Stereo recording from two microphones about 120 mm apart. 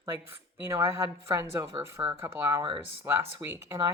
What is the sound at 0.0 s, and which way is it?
Speech, 20° right (ahead or behind).